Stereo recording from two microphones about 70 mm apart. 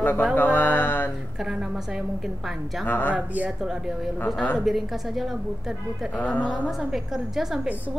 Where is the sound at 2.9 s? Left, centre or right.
Left.